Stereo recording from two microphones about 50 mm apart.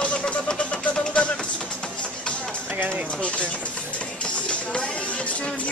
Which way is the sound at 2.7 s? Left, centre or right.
Right.